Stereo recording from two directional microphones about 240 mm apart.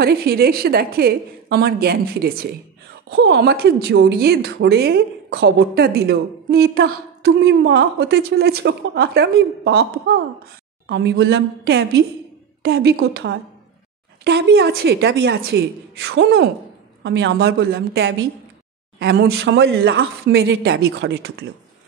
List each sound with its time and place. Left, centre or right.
0.0 s a woman's voice: right